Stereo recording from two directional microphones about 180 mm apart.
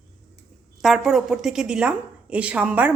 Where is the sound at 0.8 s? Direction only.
Centre (ahead or behind).